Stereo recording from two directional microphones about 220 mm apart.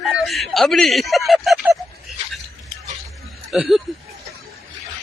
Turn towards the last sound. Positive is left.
turn(degrees=-5)  # may be behind; listen again after turning